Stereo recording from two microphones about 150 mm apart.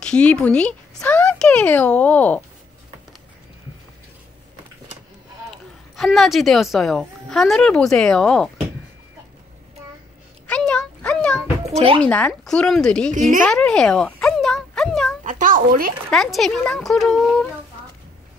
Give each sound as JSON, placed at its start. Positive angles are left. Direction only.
{"t": 0.0, "sound": "speech", "side_deg": 5}
{"t": 5.9, "sound": "speech", "side_deg": 0}
{"t": 10.4, "sound": "a sound", "side_deg": 5}
{"t": 11.6, "sound": "speech", "side_deg": -40}
{"t": 12.0, "sound": "speech", "side_deg": 10}
{"t": 13.5, "sound": "a sound", "side_deg": 5}
{"t": 15.2, "sound": "a child's voice", "side_deg": -60}
{"t": 16.1, "sound": "speech", "side_deg": 0}